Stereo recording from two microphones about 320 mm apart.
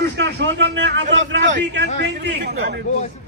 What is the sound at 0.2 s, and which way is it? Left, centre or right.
A man's voice, right.